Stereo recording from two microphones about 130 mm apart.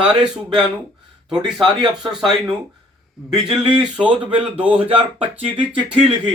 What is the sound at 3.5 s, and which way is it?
Speech, 40° right (ahead or behind).